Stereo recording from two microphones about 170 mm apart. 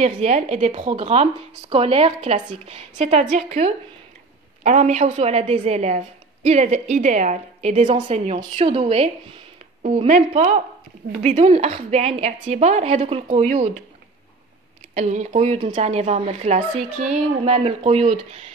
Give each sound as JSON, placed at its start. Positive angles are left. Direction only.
{"t": 0.0, "sound": "a woman's voice", "side_deg": -40}
{"t": 0.8, "sound": "a woman's voice", "side_deg": -35}
{"t": 15.0, "sound": "a woman's voice", "side_deg": -45}